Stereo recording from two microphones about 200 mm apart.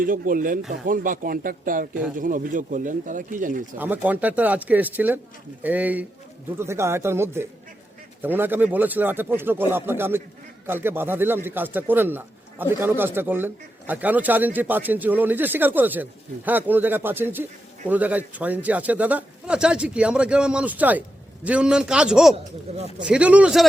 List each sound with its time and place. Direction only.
0.0 s speech: 45° right (ahead or behind)
3.8 s a man's voice: 10° right (ahead or behind)